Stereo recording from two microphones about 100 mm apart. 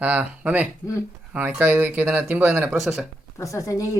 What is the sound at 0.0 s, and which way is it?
Speech, 15° right (ahead or behind).